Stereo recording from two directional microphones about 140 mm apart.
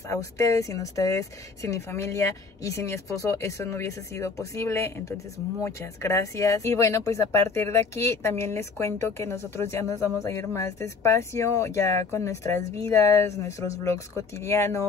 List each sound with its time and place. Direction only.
0.1 s speech: 20° left (ahead or behind)